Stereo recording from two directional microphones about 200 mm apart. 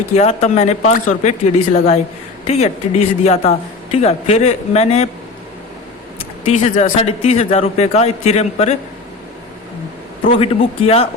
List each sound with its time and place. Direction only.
0.1 s speech: 35° left (ahead or behind)
6.4 s speech: 35° left (ahead or behind)
10.3 s speech: 30° left (ahead or behind)